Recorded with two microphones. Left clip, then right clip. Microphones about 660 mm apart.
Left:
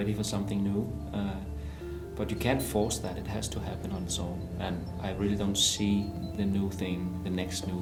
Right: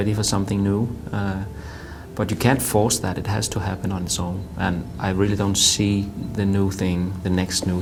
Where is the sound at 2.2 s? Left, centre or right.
Right.